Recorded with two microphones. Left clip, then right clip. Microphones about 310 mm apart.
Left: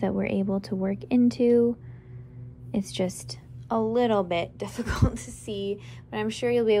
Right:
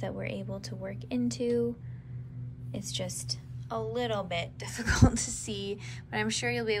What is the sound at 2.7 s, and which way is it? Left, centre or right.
A woman's voice, centre.